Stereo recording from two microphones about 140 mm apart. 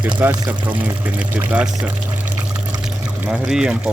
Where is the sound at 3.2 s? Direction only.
5° right (ahead or behind).